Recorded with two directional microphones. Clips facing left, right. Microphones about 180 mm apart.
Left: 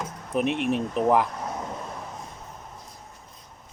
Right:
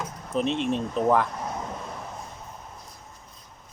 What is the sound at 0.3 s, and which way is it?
Speech, 15° left (ahead or behind).